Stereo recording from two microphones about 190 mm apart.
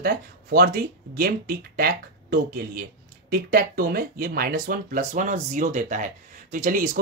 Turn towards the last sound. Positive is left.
turn(degrees=-45)  # may be behind; listen again after turning